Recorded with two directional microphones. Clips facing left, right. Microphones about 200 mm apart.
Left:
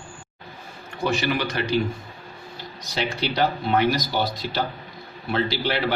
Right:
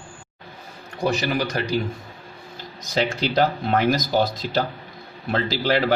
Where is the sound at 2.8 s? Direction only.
45° right (ahead or behind).